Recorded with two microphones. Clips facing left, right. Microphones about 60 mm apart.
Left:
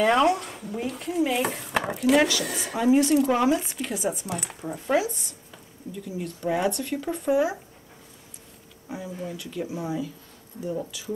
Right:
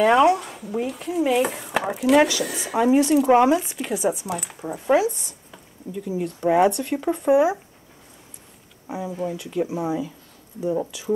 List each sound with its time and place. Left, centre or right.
0.0 s speech: centre
6.0 s speech: centre
6.7 s speech: centre
8.8 s speech: centre